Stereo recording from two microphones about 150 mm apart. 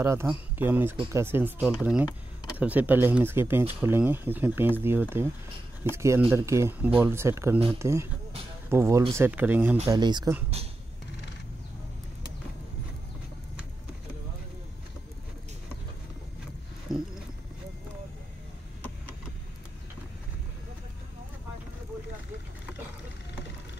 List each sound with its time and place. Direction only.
0.0 s speech: 20° right (ahead or behind)
1.6 s speech: 5° right (ahead or behind)
9.8 s speech: 30° right (ahead or behind)
16.9 s wild animals: 5° right (ahead or behind)